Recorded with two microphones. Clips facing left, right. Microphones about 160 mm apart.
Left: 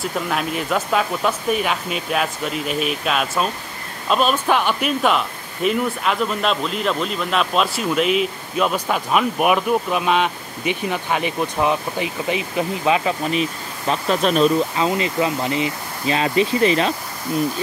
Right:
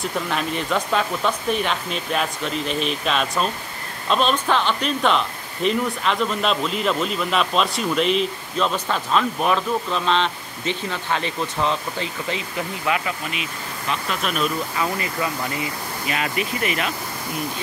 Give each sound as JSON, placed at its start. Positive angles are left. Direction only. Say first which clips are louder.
{"t": 0.0, "sound": "speech", "louder": "left 2 dB", "side_deg": 5}
{"t": 13.2, "sound": "speech", "louder": "left 8 dB", "side_deg": 35}
{"t": 14.9, "sound": "speech", "louder": "left 5 dB", "side_deg": 20}